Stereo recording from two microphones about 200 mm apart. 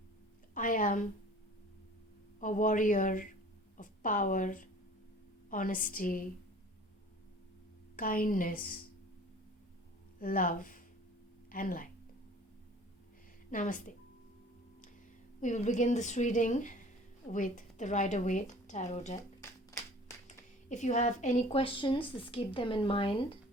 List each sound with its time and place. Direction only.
0.5 s a woman's voice: 40° left (ahead or behind)
2.4 s a woman's voice: 40° left (ahead or behind)
7.9 s a woman's voice: 45° left (ahead or behind)
10.2 s speech: 45° left (ahead or behind)
13.5 s speech: 40° left (ahead or behind)
15.4 s speech: 35° left (ahead or behind)
19.4 s music: 15° left (ahead or behind)
20.7 s speech: 35° left (ahead or behind)